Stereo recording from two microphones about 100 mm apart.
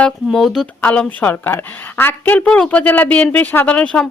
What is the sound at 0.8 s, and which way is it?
A woman's voice, 15° left (ahead or behind).